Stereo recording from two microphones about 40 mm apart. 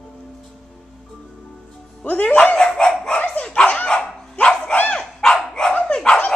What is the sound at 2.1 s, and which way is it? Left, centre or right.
Music, left.